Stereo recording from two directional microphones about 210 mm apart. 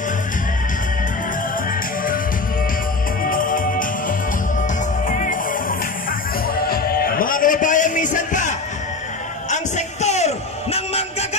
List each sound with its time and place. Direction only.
3.3 s music: 40° left (ahead or behind)
5.0 s music: 40° left (ahead or behind)